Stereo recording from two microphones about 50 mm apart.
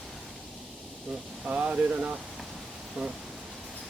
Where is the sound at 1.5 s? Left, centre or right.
Right.